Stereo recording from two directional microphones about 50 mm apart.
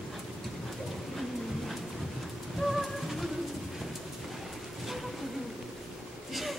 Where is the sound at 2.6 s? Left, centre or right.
Centre.